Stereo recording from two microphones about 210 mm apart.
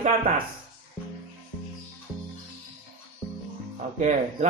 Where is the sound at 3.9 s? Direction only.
35° right (ahead or behind).